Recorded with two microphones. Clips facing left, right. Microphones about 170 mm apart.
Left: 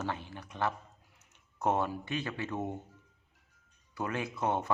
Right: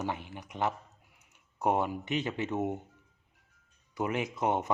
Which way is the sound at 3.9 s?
15° right (ahead or behind).